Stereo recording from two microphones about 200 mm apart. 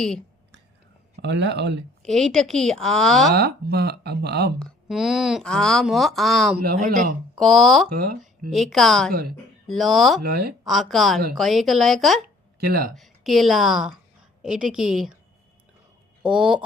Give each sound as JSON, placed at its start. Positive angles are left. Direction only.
{"t": 1.2, "sound": "speech", "side_deg": -60}
{"t": 2.0, "sound": "speech", "side_deg": 0}
{"t": 3.3, "sound": "speech", "side_deg": -55}
{"t": 4.6, "sound": "speech", "side_deg": 0}
{"t": 6.8, "sound": "speech", "side_deg": -40}
{"t": 7.3, "sound": "speech", "side_deg": 0}
{"t": 8.0, "sound": "speech", "side_deg": -45}
{"t": 8.4, "sound": "speech", "side_deg": 0}
{"t": 10.2, "sound": "speech", "side_deg": -50}
{"t": 10.7, "sound": "speech", "side_deg": 0}
{"t": 12.6, "sound": "speech", "side_deg": -50}
{"t": 13.0, "sound": "a woman's voice", "side_deg": 0}
{"t": 16.2, "sound": "speech", "side_deg": -5}